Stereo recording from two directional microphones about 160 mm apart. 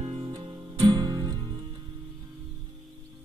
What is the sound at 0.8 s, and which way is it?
Music, 25° right (ahead or behind).